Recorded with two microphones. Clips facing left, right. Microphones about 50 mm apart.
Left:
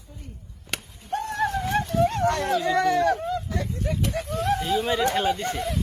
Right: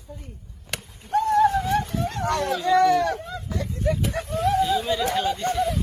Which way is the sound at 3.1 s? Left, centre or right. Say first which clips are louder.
Left 4 dB; left.